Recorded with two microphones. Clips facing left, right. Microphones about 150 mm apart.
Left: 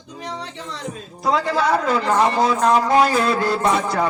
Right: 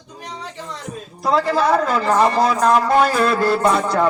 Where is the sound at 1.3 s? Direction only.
Centre (ahead or behind).